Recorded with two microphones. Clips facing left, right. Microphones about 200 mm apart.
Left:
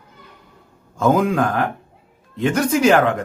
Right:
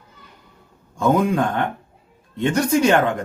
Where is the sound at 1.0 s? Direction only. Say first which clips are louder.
Left 1 dB; centre (ahead or behind).